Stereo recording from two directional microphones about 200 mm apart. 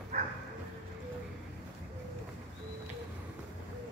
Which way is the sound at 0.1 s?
35° right (ahead or behind).